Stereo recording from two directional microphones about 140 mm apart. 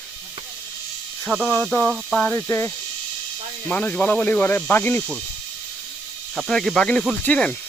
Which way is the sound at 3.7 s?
10° left (ahead or behind).